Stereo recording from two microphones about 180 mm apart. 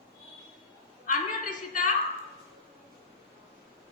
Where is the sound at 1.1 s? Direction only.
45° left (ahead or behind).